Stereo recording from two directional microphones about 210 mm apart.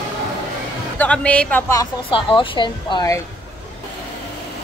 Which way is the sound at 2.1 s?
25° left (ahead or behind).